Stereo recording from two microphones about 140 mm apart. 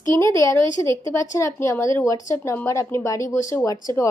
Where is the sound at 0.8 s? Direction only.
20° left (ahead or behind).